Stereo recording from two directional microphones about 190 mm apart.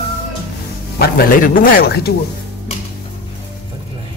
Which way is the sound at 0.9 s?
55° left (ahead or behind).